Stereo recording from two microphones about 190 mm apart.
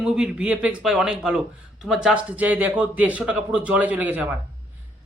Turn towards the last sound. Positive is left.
turn(degrees=-5)  # may be behind; listen again after turning